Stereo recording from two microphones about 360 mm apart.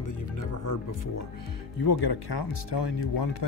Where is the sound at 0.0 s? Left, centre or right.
Left.